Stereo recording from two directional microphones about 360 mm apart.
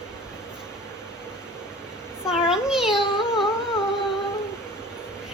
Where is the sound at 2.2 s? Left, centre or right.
Centre.